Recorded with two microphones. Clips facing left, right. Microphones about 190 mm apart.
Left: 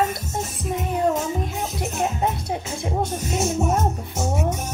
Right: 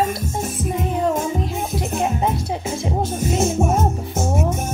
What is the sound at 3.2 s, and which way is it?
Speech, 50° right (ahead or behind).